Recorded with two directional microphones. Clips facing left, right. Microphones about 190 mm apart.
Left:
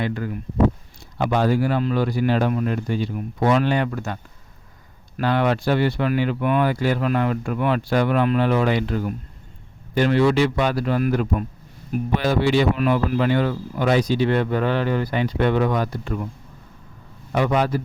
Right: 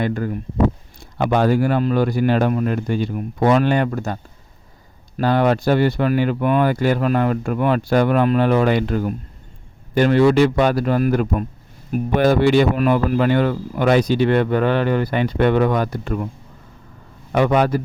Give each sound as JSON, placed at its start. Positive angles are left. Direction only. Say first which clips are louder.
{"t": 0.0, "sound": "speech", "louder": "right 4 dB", "side_deg": -45}
{"t": 1.2, "sound": "speech", "louder": "right 3 dB", "side_deg": -55}
{"t": 17.3, "sound": "speech", "louder": "right 4 dB", "side_deg": -60}